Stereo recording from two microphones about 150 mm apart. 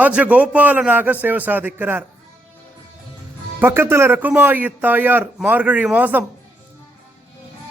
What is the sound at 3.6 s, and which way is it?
A man's voice, 15° right (ahead or behind).